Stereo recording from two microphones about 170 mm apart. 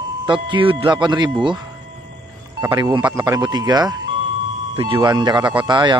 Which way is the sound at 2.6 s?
25° right (ahead or behind).